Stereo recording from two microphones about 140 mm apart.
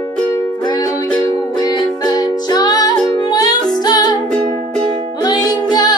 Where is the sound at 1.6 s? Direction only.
25° left (ahead or behind).